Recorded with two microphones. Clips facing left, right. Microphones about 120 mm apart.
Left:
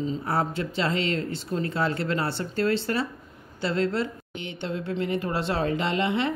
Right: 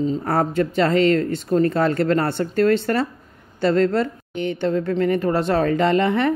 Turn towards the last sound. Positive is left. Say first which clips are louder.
# right 7 dB
turn(degrees=-50)  # may be behind; listen again after turning